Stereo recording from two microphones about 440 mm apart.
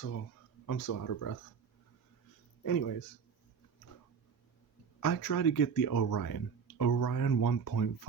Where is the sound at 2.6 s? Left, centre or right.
Left.